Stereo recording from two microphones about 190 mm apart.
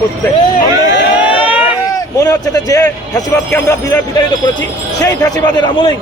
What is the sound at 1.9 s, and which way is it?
A man's voice, 20° left (ahead or behind).